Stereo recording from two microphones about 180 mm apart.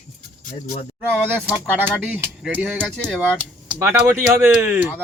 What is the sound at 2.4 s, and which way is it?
Speech, centre (ahead or behind).